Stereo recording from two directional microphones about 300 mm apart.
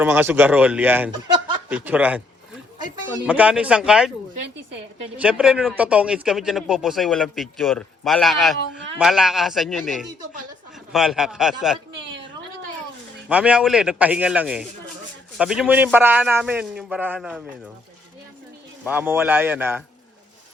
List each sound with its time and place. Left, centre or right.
0.0 s a man's voice: centre
3.2 s a man's voice: centre
5.1 s a man's voice: centre
13.2 s a man's voice: centre
18.9 s a man's voice: centre